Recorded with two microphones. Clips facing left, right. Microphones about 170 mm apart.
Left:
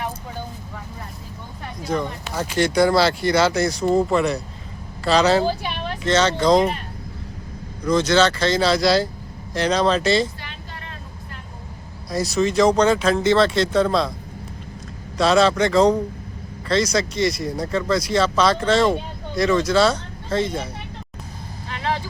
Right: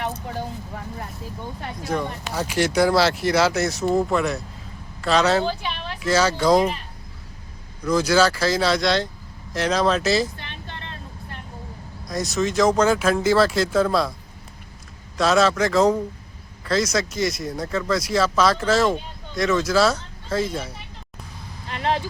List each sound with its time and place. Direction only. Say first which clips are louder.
1.8 s speech: left 2 dB; 5° right (ahead or behind)
7.9 s speech: left 1 dB; 5° right (ahead or behind)
12.1 s speech: left 3 dB; centre (ahead or behind)
15.2 s speech: left 2 dB; centre (ahead or behind)